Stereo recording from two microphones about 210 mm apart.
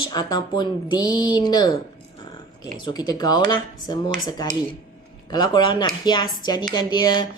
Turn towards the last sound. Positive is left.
turn(degrees=20)  # may be behind; listen again after turning